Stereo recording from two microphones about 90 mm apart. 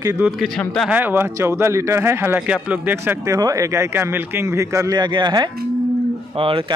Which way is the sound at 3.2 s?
40° right (ahead or behind).